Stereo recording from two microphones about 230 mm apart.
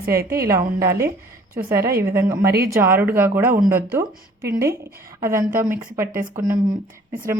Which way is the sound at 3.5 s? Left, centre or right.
Right.